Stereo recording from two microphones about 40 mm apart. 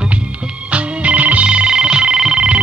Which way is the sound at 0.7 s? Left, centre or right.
Right.